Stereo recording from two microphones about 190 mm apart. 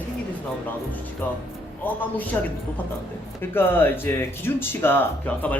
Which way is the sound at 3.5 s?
10° left (ahead or behind).